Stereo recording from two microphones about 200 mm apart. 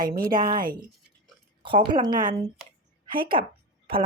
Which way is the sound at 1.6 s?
25° right (ahead or behind).